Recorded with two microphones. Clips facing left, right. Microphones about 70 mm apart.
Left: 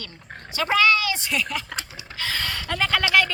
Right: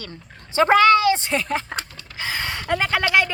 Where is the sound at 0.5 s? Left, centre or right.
Right.